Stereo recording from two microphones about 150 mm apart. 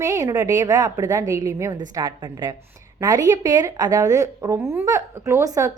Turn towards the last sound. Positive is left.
turn(degrees=-20)  # may be behind; listen again after turning